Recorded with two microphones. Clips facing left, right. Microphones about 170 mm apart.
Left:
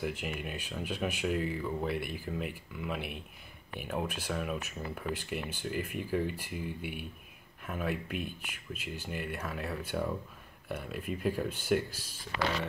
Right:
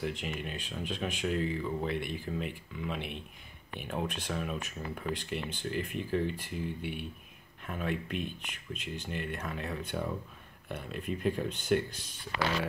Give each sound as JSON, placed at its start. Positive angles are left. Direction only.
{"t": 0.0, "sound": "speech", "side_deg": 10}